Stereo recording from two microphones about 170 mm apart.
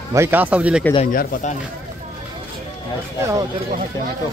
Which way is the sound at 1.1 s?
50° left (ahead or behind).